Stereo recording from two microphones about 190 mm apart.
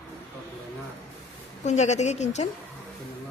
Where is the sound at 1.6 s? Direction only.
40° left (ahead or behind).